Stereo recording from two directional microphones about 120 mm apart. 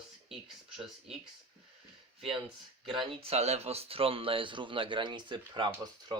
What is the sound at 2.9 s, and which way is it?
Speech, 60° right (ahead or behind).